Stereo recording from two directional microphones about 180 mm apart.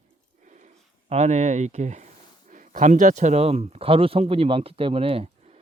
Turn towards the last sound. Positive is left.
turn(degrees=-30)  # may be behind; listen again after turning